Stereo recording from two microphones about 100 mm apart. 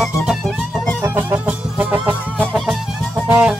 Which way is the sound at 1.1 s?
20° right (ahead or behind).